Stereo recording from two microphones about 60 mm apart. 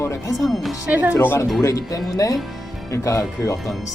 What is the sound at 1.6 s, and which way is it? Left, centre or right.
Speech, left.